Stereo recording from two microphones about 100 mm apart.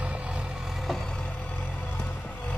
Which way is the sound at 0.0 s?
10° right (ahead or behind).